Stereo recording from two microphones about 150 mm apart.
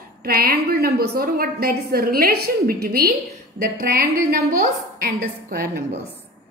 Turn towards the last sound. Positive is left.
turn(degrees=-90)